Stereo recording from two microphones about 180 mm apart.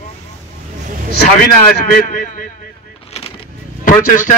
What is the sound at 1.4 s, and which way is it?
A man's voice, 50° left (ahead or behind).